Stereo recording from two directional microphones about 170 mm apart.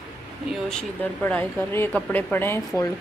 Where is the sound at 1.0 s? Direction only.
10° left (ahead or behind).